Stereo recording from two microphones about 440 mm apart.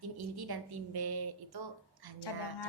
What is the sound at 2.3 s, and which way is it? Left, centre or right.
Speech, left.